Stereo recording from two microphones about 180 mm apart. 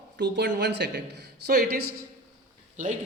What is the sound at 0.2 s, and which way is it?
Speech, 70° right (ahead or behind).